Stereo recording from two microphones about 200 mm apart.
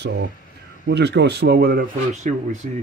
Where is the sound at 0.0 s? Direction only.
55° right (ahead or behind); by 2.7 s 35° right (ahead or behind).